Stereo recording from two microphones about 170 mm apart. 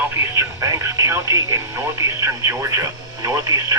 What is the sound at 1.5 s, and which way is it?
Speech, 15° right (ahead or behind).